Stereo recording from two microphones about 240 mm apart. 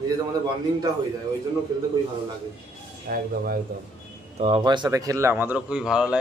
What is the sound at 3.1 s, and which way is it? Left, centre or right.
Speech, right.